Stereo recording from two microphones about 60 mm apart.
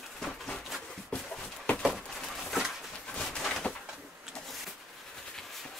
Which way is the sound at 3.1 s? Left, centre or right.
Centre.